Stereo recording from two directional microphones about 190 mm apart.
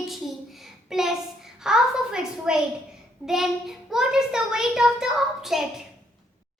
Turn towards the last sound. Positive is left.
turn(degrees=0)  # may be behind; listen again after turning